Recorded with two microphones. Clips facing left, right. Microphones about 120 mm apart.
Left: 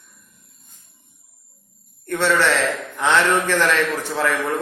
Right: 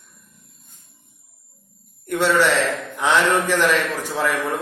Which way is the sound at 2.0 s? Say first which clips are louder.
Right 1 dB; 15° right (ahead or behind).